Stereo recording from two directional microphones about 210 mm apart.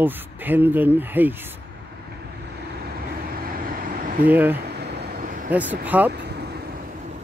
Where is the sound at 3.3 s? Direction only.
45° right (ahead or behind).